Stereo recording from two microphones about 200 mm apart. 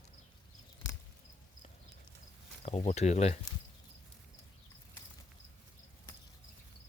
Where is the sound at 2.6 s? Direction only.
35° left (ahead or behind).